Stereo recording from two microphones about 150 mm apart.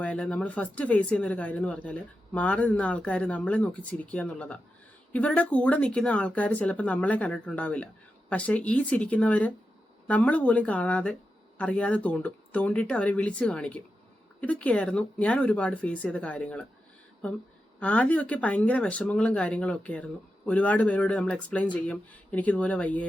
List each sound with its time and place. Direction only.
0.0 s speech: 10° left (ahead or behind)
17.7 s speech: 10° left (ahead or behind)